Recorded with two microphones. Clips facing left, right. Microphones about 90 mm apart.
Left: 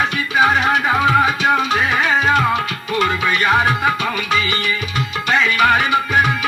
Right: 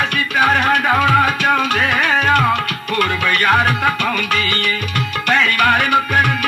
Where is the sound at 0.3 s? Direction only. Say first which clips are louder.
Even; 60° right (ahead or behind).